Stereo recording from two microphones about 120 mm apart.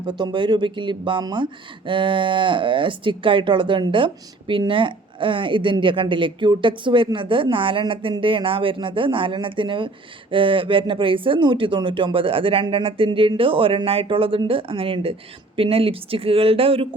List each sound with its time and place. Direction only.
0.0 s speech: 40° right (ahead or behind)